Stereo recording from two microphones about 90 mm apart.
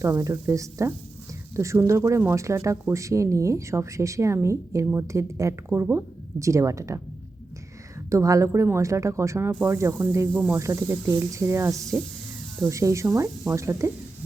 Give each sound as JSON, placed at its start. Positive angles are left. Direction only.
{"t": 0.0, "sound": "speech", "side_deg": -35}
{"t": 8.1, "sound": "speech", "side_deg": -35}